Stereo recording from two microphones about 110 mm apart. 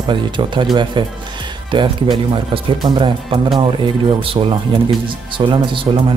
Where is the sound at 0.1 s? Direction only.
45° right (ahead or behind).